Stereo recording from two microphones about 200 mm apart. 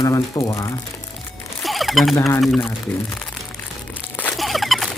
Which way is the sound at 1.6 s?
Centre (ahead or behind).